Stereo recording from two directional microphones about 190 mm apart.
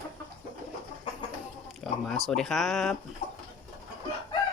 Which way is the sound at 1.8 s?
Centre (ahead or behind).